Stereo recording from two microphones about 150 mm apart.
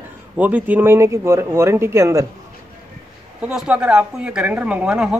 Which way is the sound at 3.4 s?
5° right (ahead or behind).